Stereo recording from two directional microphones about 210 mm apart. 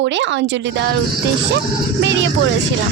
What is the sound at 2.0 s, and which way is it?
Speech, 60° right (ahead or behind).